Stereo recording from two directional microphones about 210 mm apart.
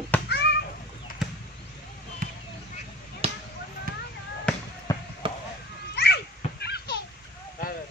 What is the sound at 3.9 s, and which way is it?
Basketball bounce, 45° right (ahead or behind).